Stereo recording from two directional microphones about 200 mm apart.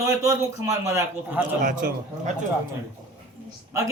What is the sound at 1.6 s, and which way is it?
Speech, 40° right (ahead or behind).